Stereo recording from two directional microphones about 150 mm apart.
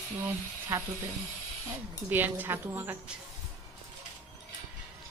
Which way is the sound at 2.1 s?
10° right (ahead or behind).